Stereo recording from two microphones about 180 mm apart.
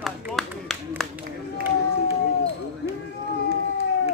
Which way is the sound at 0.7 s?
Centre (ahead or behind).